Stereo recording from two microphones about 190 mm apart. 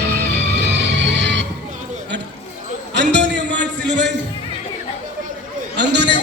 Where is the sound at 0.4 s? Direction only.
60° right (ahead or behind).